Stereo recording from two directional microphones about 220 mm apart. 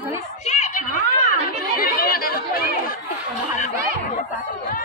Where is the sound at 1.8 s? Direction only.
40° left (ahead or behind).